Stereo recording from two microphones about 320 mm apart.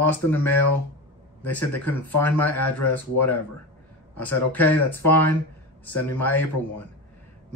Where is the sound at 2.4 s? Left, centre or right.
Left.